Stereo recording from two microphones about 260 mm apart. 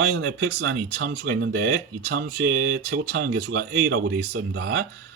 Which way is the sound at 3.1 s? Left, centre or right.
Right.